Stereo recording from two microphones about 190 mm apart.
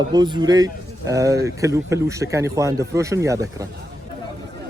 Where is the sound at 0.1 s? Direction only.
20° right (ahead or behind).